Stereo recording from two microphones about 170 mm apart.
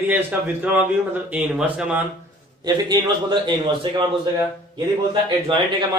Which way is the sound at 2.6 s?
25° right (ahead or behind).